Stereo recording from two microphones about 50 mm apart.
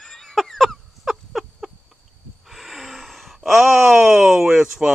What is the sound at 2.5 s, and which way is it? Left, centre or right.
Groan, centre.